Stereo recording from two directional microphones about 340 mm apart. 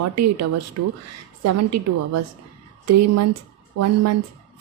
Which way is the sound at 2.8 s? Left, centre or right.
Right.